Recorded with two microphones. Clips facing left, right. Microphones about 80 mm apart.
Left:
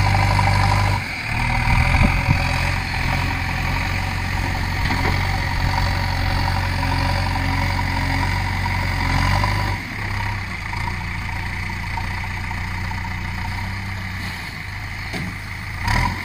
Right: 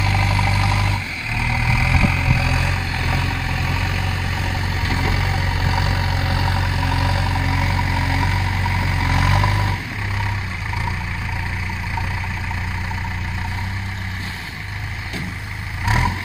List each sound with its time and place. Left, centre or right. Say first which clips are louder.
0.0 s vehicle: left 2 dB; centre
15.8 s vehicle: right 1 dB; centre